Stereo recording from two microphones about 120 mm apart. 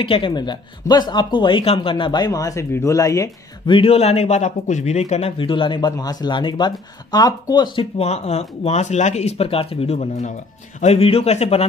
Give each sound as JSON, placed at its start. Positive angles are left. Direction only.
{"t": 0.0, "sound": "a man's voice", "side_deg": 45}
{"t": 3.6, "sound": "speech", "side_deg": 50}
{"t": 5.4, "sound": "a man's voice", "side_deg": 45}
{"t": 8.0, "sound": "speech", "side_deg": 65}